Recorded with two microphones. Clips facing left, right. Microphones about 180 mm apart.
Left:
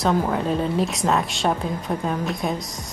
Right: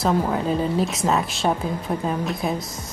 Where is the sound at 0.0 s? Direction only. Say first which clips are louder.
Even; centre (ahead or behind).